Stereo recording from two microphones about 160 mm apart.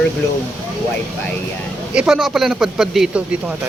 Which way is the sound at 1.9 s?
5° right (ahead or behind).